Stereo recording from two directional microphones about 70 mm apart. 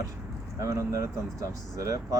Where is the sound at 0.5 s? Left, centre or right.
Right.